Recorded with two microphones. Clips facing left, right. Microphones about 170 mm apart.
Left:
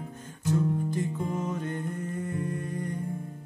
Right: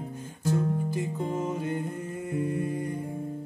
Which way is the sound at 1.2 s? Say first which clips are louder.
Right 2 dB; 30° right (ahead or behind).